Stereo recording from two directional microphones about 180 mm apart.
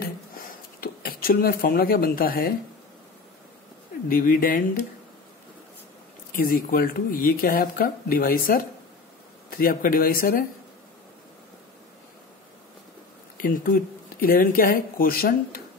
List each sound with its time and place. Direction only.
0.7 s speech: 55° left (ahead or behind)
4.1 s speech: 50° left (ahead or behind)
6.3 s speech: 50° left (ahead or behind)
13.4 s speech: 50° left (ahead or behind)